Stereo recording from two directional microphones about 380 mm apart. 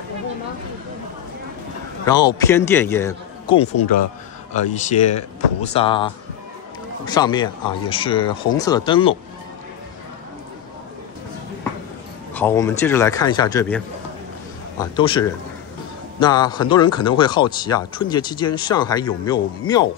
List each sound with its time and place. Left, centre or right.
2.0 s speech: centre
12.4 s speech: centre
15.0 s speech: centre